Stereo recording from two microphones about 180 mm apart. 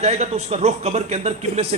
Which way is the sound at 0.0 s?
35° right (ahead or behind).